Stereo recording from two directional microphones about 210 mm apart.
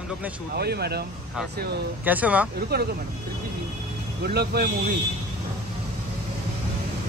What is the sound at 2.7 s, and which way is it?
Speech, 50° right (ahead or behind).